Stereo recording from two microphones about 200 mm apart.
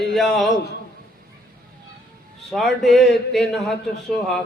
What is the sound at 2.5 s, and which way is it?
Speech, centre (ahead or behind).